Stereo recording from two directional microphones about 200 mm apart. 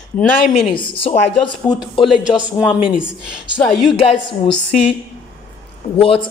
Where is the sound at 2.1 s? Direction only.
5° right (ahead or behind).